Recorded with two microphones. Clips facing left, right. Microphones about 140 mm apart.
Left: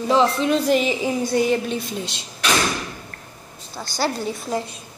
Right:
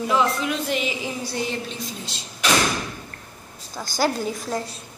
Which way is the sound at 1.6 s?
60° left (ahead or behind).